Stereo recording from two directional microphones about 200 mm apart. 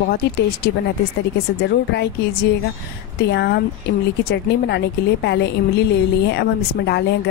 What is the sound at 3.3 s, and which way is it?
Speech, 55° left (ahead or behind).